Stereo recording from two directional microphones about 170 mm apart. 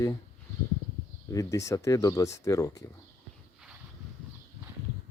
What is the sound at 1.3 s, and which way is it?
Speech, 20° left (ahead or behind).